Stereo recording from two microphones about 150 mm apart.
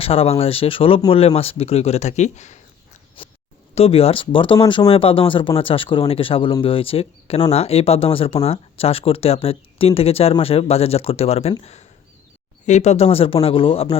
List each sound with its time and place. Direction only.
0.0 s speech: 40° left (ahead or behind)
3.2 s a sound: 35° left (ahead or behind)
3.8 s speech: 40° left (ahead or behind)